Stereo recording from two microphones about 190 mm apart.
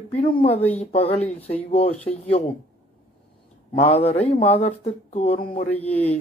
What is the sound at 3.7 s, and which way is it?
Speech, 35° left (ahead or behind).